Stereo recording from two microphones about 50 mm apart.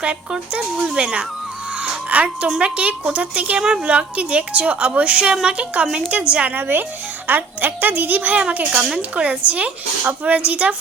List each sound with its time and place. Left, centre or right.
0.0 s a woman's voice: right
1.8 s music: right
2.6 s a woman's voice: right
3.6 s speech: centre
3.8 s a woman's voice: right
6.5 s a woman's voice: right
8.4 s a woman's voice: right